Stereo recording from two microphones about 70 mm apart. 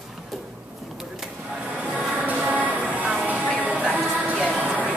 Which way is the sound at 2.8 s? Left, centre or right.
Right.